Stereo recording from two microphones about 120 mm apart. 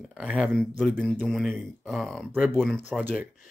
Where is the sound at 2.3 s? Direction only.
15° right (ahead or behind).